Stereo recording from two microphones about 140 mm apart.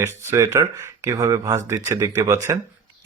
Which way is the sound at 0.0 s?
20° right (ahead or behind).